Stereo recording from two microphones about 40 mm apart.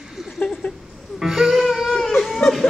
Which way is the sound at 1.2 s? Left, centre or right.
Centre.